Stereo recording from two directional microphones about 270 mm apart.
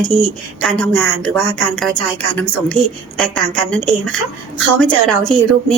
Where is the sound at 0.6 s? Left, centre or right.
Centre.